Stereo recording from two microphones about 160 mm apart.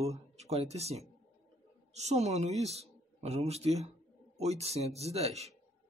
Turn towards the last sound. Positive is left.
turn(degrees=-40)  # may be behind; listen again after turning